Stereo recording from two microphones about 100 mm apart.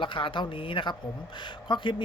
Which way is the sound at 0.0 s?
60° left (ahead or behind).